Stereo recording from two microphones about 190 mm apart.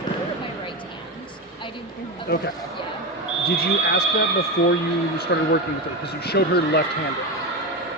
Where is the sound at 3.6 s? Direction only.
55° left (ahead or behind).